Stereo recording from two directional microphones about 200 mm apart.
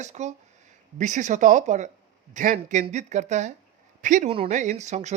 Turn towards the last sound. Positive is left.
turn(degrees=-35)  # may be behind; listen again after turning